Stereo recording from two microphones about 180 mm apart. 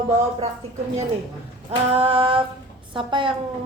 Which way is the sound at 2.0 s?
30° right (ahead or behind).